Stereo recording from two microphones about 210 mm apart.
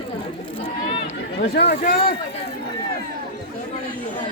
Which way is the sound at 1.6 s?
40° left (ahead or behind).